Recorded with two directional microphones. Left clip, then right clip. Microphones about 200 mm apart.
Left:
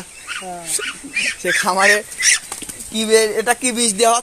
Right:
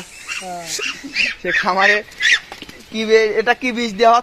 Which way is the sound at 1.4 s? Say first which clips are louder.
Left 1 dB; 10° left (ahead or behind).